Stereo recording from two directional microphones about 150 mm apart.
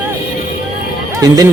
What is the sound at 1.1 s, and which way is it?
Speech, 25° right (ahead or behind).